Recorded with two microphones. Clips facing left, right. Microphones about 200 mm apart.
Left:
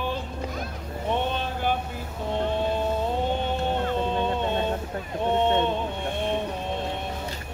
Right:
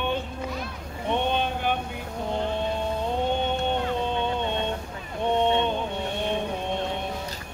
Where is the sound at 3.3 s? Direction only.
Centre (ahead or behind).